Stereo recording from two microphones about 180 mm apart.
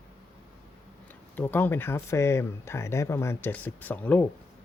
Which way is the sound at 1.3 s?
10° left (ahead or behind).